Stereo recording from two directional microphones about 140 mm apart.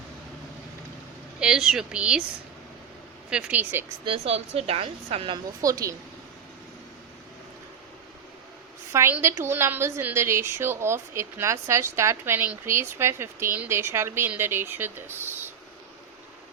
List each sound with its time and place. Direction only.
1.4 s speech: 5° right (ahead or behind)
3.2 s a woman's voice: 5° right (ahead or behind)
4.0 s a woman's voice: 45° right (ahead or behind)
5.6 s a woman's voice: 25° right (ahead or behind)
8.9 s a woman's voice: 15° right (ahead or behind)